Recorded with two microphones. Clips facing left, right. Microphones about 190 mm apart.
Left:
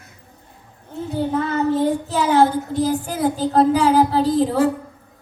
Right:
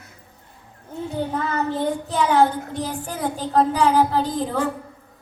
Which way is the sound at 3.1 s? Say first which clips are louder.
Left 6 dB; 35° left (ahead or behind).